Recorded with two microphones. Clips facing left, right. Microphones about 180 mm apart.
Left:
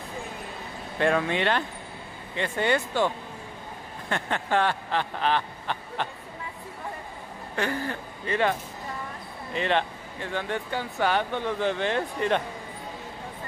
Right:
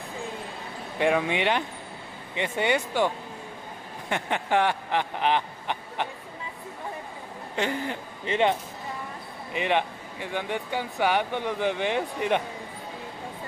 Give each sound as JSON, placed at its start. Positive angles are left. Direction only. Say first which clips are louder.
{"t": 0.9, "sound": "speech", "louder": "even", "side_deg": -15}
{"t": 4.1, "sound": "speech", "louder": "right 1 dB", "side_deg": -15}
{"t": 7.5, "sound": "speech", "louder": "even", "side_deg": -20}